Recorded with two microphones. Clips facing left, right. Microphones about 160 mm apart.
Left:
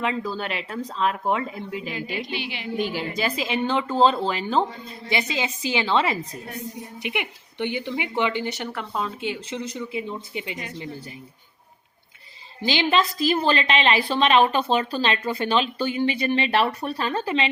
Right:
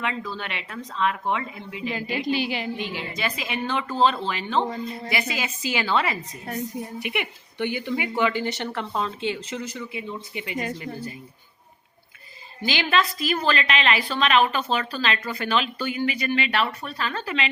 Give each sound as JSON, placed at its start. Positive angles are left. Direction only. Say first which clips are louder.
{"t": 0.0, "sound": "speech", "louder": "left 4 dB", "side_deg": 30}
{"t": 1.9, "sound": "a woman's voice", "louder": "right 9 dB", "side_deg": -40}
{"t": 3.2, "sound": "a woman's voice", "louder": "left 4 dB", "side_deg": 30}
{"t": 10.8, "sound": "speech", "louder": "right 2 dB", "side_deg": 15}
{"t": 12.6, "sound": "speech", "louder": "left 2 dB", "side_deg": 25}